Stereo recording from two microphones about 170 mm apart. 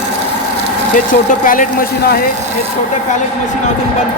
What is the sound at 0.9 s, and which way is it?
Speech, 50° left (ahead or behind).